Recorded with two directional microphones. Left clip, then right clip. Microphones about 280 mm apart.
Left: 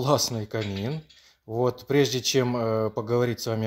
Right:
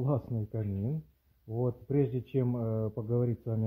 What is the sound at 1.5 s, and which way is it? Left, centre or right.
Speech, centre.